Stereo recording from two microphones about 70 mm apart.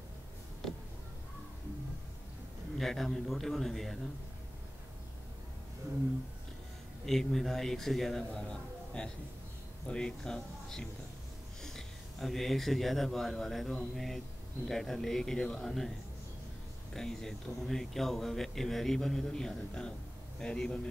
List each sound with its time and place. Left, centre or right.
2.8 s a man's voice: centre
7.1 s a man's voice: centre
16.9 s a man's voice: centre